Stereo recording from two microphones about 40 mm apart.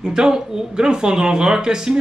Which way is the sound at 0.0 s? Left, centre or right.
Centre.